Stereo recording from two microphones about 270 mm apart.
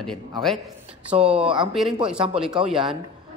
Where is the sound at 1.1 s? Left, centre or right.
Right.